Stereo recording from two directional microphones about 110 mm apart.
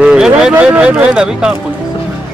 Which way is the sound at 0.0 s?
10° right (ahead or behind).